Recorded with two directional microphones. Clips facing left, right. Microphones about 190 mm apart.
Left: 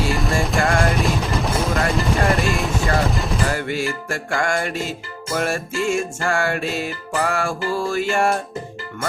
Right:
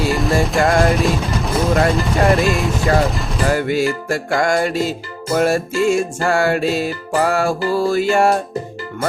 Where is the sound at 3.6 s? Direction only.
40° right (ahead or behind).